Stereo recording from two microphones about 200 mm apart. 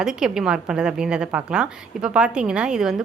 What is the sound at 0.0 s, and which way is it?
A woman's voice, 5° right (ahead or behind).